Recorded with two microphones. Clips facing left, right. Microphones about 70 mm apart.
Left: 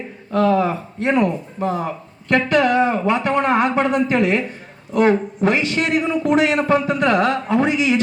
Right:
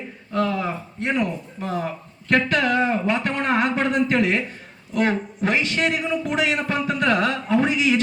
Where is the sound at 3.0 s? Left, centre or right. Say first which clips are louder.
Left 5 dB; left.